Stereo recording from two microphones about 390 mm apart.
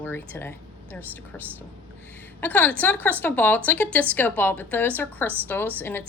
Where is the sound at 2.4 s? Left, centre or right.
Centre.